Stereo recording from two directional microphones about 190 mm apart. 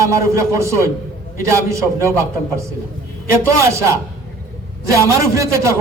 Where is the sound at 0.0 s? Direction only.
15° right (ahead or behind).